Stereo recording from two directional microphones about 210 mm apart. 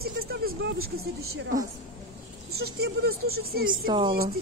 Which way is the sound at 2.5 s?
90° right.